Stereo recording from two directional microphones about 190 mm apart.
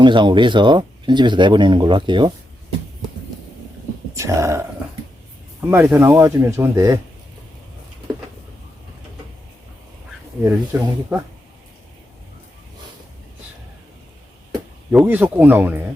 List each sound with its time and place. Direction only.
0.0 s speech: 25° right (ahead or behind)
4.1 s speech: 15° right (ahead or behind)
5.7 s speech: 10° right (ahead or behind)
10.4 s speech: 10° right (ahead or behind)
14.9 s speech: 10° right (ahead or behind)